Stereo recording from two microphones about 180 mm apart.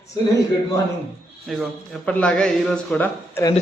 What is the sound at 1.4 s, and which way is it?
Speech, centre (ahead or behind).